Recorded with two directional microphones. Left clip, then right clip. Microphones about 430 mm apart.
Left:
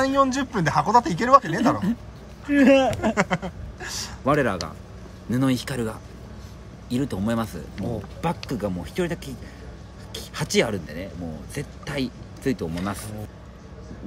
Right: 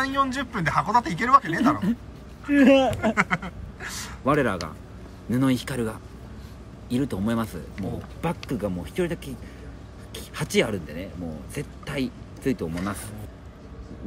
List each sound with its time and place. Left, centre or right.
0.0 s speech: centre